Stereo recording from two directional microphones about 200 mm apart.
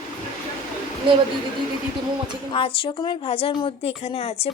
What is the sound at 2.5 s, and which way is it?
A woman's voice, 25° left (ahead or behind).